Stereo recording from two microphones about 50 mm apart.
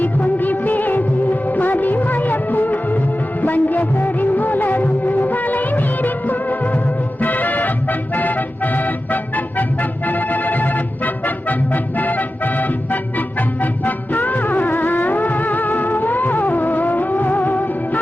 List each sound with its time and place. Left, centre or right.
0.0 s music of bollywood: left
7.2 s music: left